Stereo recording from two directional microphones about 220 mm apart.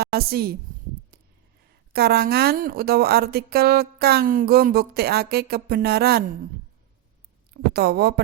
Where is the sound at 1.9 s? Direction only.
45° right (ahead or behind).